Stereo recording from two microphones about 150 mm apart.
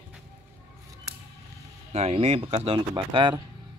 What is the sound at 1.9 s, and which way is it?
Speech, 45° right (ahead or behind).